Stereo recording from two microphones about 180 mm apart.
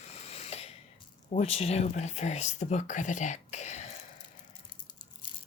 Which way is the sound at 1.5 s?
35° left (ahead or behind).